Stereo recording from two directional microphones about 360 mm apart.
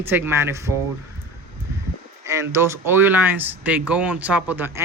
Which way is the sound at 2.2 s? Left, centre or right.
Centre.